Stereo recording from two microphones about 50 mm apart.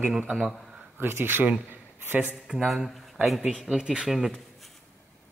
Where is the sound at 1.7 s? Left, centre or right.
Right.